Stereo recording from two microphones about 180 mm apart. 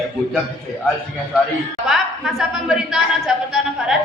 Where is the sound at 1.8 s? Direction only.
Centre (ahead or behind).